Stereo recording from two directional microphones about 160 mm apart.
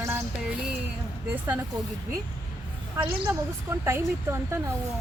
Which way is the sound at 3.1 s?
15° right (ahead or behind).